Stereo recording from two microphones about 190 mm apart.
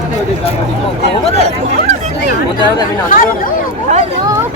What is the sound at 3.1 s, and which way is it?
Speech, 45° left (ahead or behind).